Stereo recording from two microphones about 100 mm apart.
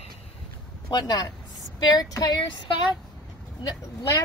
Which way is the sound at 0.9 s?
45° left (ahead or behind).